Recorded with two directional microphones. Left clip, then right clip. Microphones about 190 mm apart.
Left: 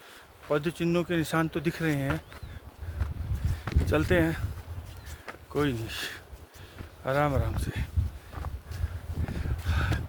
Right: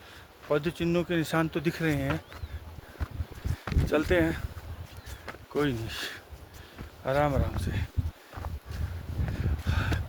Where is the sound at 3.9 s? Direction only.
15° left (ahead or behind).